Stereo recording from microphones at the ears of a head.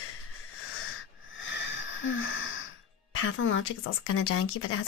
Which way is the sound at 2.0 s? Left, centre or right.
Left.